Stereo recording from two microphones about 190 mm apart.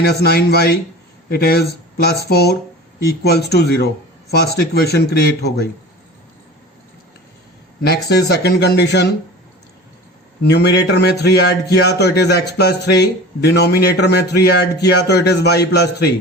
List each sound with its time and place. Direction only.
0.0 s a man's voice: 60° left (ahead or behind)
7.8 s a man's voice: 60° left (ahead or behind)
10.4 s a man's voice: 60° left (ahead or behind)